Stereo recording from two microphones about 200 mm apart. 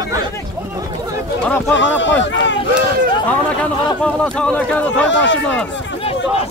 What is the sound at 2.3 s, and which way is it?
Run, 65° left (ahead or behind).